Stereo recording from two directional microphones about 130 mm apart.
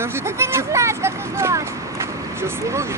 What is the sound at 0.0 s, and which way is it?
Vehicle, 20° right (ahead or behind).